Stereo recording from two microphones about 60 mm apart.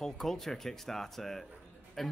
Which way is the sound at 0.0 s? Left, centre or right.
Centre.